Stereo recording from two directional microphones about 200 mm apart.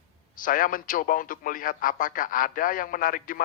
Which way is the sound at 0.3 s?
45° left (ahead or behind).